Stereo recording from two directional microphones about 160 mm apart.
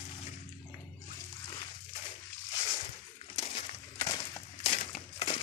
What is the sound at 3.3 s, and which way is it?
Crumpling, 35° left (ahead or behind).